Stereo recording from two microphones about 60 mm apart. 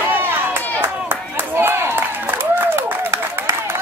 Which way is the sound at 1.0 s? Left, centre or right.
Right.